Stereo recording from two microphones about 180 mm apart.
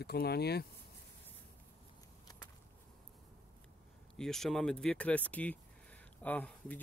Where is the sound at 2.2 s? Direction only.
20° left (ahead or behind).